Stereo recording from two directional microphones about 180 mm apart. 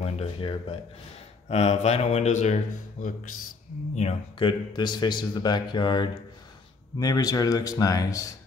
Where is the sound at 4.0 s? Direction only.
30° left (ahead or behind).